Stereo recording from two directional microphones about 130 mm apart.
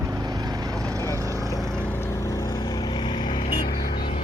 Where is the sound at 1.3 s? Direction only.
25° left (ahead or behind).